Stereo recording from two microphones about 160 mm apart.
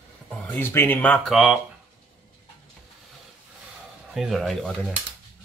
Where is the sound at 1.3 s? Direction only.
Centre (ahead or behind).